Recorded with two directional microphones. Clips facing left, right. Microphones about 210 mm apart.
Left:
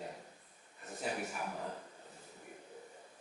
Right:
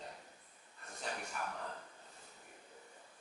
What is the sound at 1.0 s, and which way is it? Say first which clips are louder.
Speech: left 4 dB; 10° left (ahead or behind).